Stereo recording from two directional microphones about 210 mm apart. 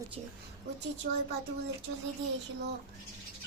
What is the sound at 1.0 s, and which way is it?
Speech, 40° right (ahead or behind).